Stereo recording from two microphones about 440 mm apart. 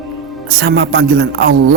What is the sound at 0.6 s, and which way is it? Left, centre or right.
A man's voice, right.